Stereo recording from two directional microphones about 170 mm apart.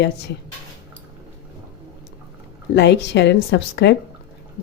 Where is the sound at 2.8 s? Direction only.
90° left.